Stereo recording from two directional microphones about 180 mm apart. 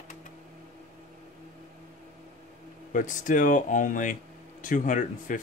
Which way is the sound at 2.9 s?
45° left (ahead or behind).